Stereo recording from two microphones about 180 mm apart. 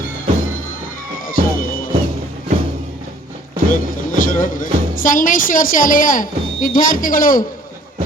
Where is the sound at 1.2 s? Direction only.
50° left (ahead or behind).